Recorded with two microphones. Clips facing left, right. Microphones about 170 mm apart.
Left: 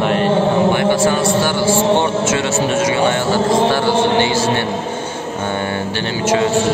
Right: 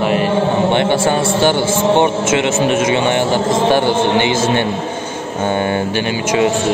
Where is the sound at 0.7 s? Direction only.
25° right (ahead or behind).